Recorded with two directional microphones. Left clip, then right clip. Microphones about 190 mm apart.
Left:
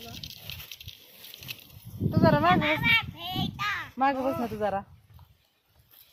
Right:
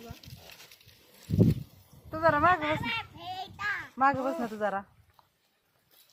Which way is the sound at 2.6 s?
10° right (ahead or behind).